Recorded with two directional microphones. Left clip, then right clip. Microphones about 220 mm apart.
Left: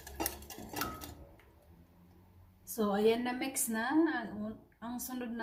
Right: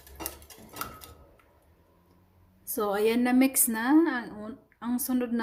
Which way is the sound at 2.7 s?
50° right (ahead or behind).